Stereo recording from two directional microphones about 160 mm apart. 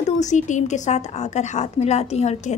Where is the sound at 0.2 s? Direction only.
50° left (ahead or behind).